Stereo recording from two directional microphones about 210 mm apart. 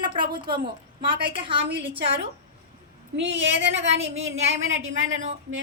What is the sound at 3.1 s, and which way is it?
Speech, 60° right (ahead or behind).